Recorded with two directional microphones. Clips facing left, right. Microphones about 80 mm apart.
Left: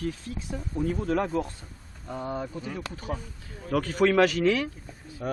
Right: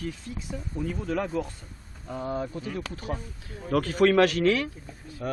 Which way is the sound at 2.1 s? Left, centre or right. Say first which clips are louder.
Right 1 dB; centre.